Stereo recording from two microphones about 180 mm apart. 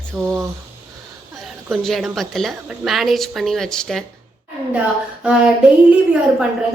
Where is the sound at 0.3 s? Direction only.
15° right (ahead or behind).